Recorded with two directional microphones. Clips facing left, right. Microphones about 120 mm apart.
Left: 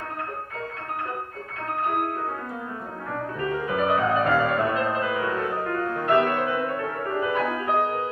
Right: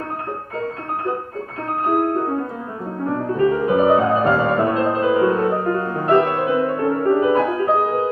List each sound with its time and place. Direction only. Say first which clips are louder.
2.0 s music: right 8 dB; 30° right (ahead or behind)